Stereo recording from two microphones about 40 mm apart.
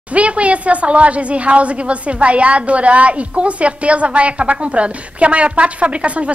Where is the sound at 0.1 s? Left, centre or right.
Right.